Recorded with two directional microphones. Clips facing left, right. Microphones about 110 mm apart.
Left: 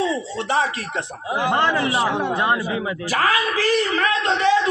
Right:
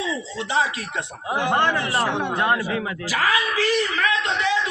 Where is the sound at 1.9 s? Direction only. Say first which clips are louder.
Left 2 dB; centre (ahead or behind).